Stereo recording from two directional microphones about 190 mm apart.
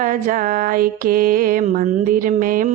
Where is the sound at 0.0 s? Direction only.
45° right (ahead or behind).